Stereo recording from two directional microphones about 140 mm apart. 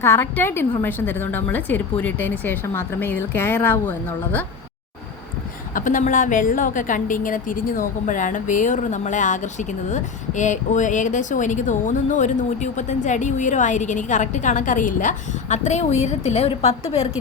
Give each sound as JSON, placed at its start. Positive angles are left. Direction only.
{"t": 0.0, "sound": "speech", "side_deg": 20}
{"t": 5.7, "sound": "a woman's voice", "side_deg": 70}